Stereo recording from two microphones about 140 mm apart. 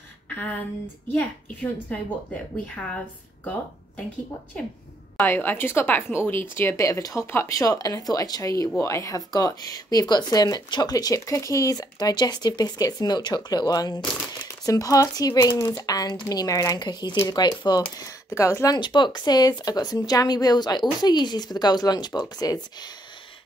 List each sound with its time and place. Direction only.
1.1 s speech: 10° left (ahead or behind)
4.6 s speech: 5° left (ahead or behind); by 22.8 s 30° left (ahead or behind)